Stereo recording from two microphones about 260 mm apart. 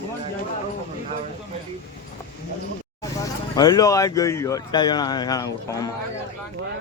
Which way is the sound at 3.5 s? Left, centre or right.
Centre.